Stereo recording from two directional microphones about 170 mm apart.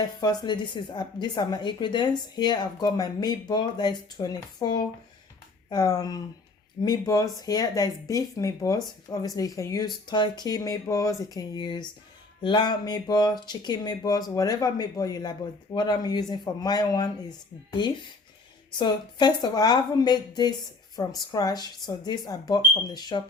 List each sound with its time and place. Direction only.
0.0 s speech: 25° left (ahead or behind)